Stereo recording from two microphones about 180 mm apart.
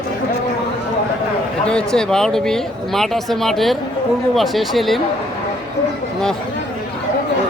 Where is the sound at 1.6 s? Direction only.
5° left (ahead or behind).